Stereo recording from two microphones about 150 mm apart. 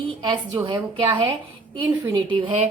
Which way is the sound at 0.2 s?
30° right (ahead or behind).